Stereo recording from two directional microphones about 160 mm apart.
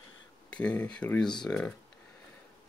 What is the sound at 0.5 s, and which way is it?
Speech, 5° left (ahead or behind).